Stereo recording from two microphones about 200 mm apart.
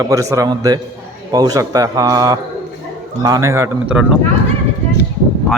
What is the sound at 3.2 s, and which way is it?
Speech, 15° right (ahead or behind).